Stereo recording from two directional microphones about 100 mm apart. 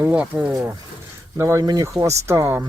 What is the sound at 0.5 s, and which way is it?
Speech, 35° right (ahead or behind).